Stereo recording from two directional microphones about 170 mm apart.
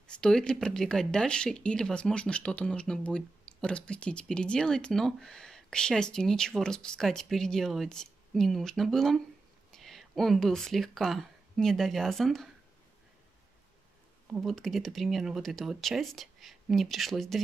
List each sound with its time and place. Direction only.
0.0 s speech: 5° left (ahead or behind)
14.3 s speech: centre (ahead or behind)